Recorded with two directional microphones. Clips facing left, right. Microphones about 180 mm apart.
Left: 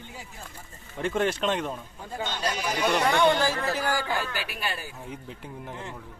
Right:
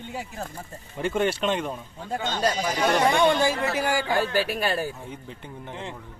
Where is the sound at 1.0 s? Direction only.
Centre (ahead or behind).